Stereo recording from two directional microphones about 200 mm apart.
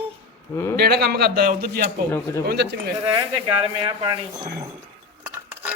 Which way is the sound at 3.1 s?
25° right (ahead or behind).